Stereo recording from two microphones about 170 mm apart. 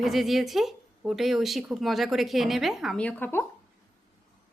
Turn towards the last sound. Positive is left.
turn(degrees=10)  # may be behind; listen again after turning